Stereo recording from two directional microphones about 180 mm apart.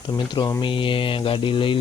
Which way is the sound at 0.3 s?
25° left (ahead or behind).